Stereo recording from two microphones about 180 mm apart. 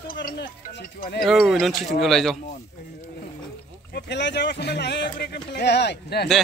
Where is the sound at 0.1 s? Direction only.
50° left (ahead or behind).